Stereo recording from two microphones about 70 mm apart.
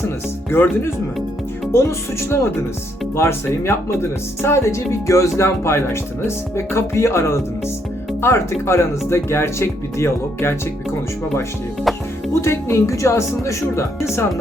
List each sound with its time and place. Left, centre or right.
0.5 s speech: left
12.3 s speech: left